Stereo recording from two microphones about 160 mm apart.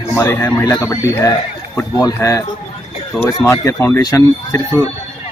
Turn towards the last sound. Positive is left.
turn(degrees=20)  # may be behind; listen again after turning